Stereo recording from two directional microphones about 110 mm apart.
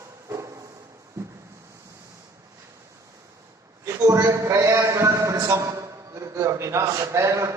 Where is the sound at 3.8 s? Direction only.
25° right (ahead or behind).